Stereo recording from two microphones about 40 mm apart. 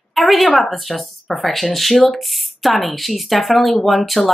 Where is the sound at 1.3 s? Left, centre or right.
Centre.